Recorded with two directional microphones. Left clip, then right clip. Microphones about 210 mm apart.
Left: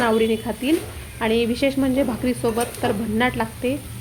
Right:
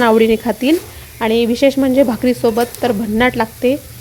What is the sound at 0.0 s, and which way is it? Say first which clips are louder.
Speech: right 8 dB; 40° right (ahead or behind).